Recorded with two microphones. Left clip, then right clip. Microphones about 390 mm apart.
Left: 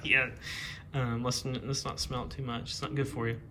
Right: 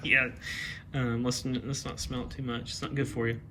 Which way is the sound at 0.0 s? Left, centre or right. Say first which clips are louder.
Right 2 dB; left.